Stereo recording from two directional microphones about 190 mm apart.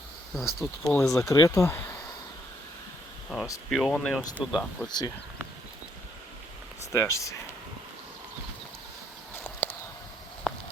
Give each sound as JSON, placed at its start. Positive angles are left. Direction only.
{"t": 0.3, "sound": "speech", "side_deg": 0}
{"t": 1.1, "sound": "speech", "side_deg": 15}
{"t": 3.3, "sound": "speech", "side_deg": -5}
{"t": 4.9, "sound": "speech", "side_deg": 20}
{"t": 6.9, "sound": "speech", "side_deg": 15}
{"t": 9.3, "sound": "a sound", "side_deg": 10}
{"t": 10.5, "sound": "a sound", "side_deg": 0}